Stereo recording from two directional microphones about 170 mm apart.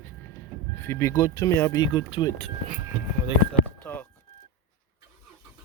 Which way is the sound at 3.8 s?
10° left (ahead or behind).